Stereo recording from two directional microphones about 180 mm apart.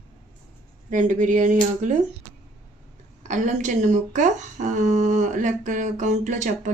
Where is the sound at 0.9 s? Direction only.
45° right (ahead or behind).